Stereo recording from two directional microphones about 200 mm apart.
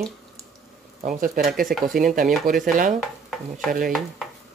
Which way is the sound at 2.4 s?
45° right (ahead or behind).